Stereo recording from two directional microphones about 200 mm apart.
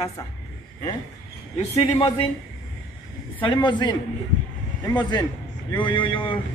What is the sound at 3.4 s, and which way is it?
Speech, 25° left (ahead or behind).